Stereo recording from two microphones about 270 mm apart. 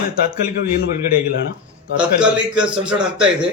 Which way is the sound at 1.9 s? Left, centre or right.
Centre.